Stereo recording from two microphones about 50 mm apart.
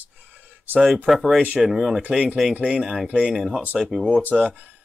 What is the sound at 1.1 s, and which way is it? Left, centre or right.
Speech, centre.